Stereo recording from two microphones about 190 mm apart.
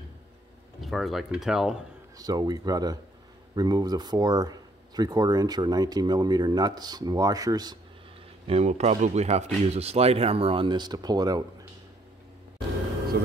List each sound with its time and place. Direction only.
0.7 s speech: centre (ahead or behind)
2.1 s speech: 20° right (ahead or behind)
8.5 s speech: 35° right (ahead or behind)
13.1 s speech: 65° right (ahead or behind)